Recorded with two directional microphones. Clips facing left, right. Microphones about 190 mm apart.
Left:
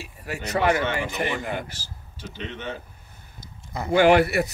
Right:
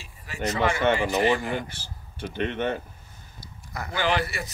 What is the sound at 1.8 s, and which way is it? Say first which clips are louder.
Speech: right 5 dB; 60° right (ahead or behind).